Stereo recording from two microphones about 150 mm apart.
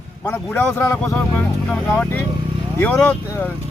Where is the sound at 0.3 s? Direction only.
15° left (ahead or behind).